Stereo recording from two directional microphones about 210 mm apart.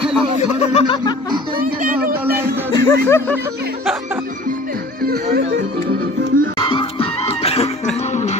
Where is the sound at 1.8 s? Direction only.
45° right (ahead or behind).